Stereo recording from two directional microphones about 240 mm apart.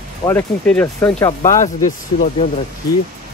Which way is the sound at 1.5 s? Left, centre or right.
Left.